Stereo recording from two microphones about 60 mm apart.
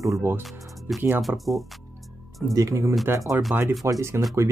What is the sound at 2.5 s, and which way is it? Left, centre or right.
Speech, right.